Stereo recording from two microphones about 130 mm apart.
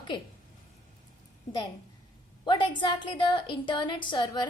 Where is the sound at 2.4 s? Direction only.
35° left (ahead or behind).